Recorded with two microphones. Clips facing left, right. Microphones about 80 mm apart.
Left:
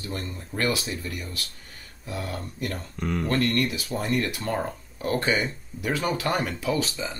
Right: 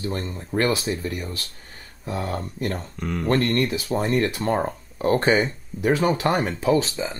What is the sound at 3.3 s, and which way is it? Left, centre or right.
Speech, right.